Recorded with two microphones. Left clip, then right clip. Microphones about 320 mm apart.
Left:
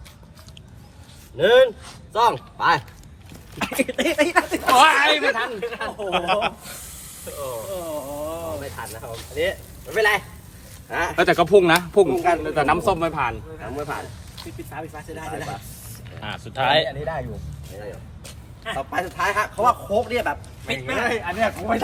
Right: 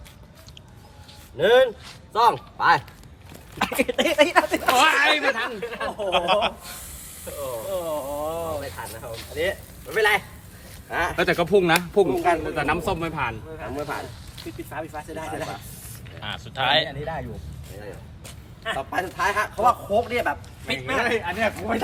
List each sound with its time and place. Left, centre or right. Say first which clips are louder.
1.4 s speech: left 2 dB; centre
3.8 s speech: right 1 dB; right
4.7 s speech: left 4 dB; centre
5.5 s a man's voice: left 1 dB; centre
7.7 s chainsaw: right 2 dB; right
8.6 s a man's voice: left 1 dB; centre
11.2 s speech: left 5 dB; centre
12.1 s a man's voice: left 2 dB; centre
12.5 s a man's voice: left 5 dB; centre
18.3 s a sound: right 1 dB; centre
18.9 s a man's voice: left 2 dB; centre